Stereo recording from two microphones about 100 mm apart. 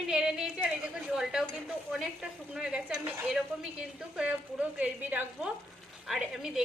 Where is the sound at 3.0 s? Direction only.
20° right (ahead or behind).